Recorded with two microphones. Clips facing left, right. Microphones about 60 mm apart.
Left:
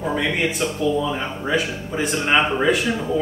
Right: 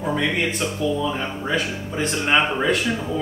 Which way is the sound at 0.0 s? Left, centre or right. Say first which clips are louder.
Left 1 dB; centre.